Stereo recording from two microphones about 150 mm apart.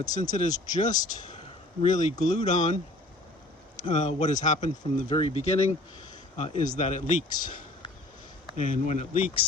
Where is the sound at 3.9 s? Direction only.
50° left (ahead or behind).